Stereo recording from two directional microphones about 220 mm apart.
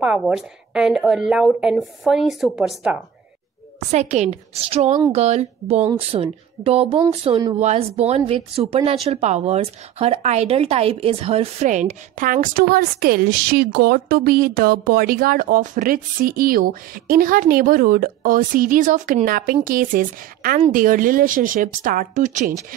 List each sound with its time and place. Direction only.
0.0 s a woman's voice: 5° right (ahead or behind)
3.9 s speech: 30° right (ahead or behind)